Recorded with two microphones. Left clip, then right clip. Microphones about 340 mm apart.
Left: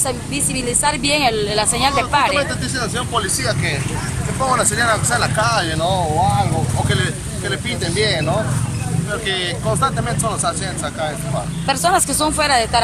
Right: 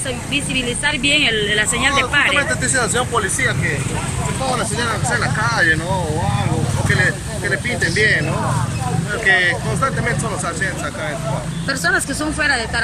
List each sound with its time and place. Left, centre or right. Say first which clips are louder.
0.3 s speech: right 2 dB; left
1.8 s speech: left 1 dB; centre
5.2 s speech: even; centre
9.2 s speech: right 9 dB; centre
11.6 s speech: left 2 dB; centre